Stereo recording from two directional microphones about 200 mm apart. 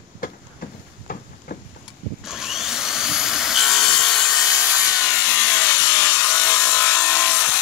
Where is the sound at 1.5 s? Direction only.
40° left (ahead or behind).